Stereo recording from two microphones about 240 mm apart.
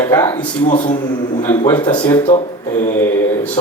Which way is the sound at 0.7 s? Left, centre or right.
Left.